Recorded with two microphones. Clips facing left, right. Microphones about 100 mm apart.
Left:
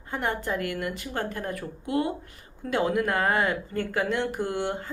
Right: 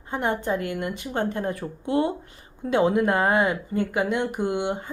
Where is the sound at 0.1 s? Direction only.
20° right (ahead or behind).